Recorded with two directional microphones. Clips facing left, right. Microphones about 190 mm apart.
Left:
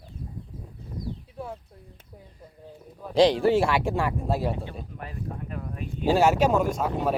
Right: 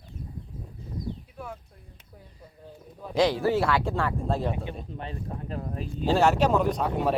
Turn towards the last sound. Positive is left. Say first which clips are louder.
# even
turn(degrees=0)  # may be behind; listen again after turning